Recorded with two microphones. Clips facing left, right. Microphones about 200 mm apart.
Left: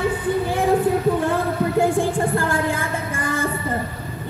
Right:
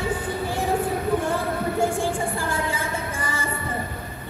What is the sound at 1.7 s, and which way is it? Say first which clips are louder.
Music: left 5 dB; 55° left (ahead or behind).